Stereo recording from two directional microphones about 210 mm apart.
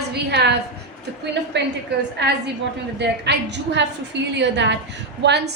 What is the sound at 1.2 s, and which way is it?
A woman's voice, 55° right (ahead or behind).